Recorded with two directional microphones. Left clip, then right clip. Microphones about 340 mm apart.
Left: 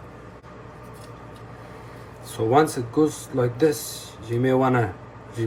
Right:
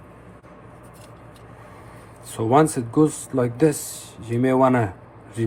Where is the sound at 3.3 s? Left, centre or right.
Centre.